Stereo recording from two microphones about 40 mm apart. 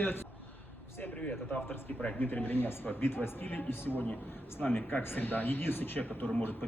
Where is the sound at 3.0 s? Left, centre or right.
Left.